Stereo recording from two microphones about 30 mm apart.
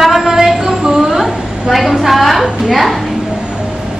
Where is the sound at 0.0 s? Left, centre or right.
Centre.